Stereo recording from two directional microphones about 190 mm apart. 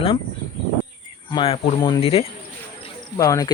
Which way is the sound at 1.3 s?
30° left (ahead or behind).